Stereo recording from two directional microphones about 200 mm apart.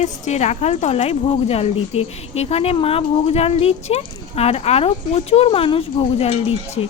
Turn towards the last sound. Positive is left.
turn(degrees=30)  # may be behind; listen again after turning